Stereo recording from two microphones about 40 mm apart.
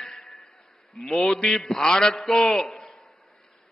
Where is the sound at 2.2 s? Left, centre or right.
Centre.